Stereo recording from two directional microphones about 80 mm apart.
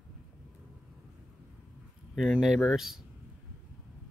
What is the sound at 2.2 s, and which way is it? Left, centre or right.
Speech, centre.